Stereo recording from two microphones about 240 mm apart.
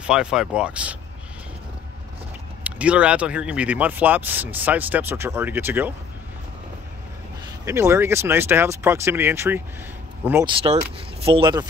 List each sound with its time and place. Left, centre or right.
0.0 s speech: centre
2.6 s speech: centre
7.6 s speech: centre
10.6 s speech: right